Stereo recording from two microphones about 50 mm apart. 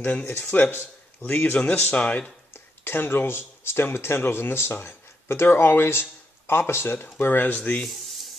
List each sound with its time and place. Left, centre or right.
0.4 s speech: left
2.8 s speech: left
7.5 s speech: left
7.9 s rub: centre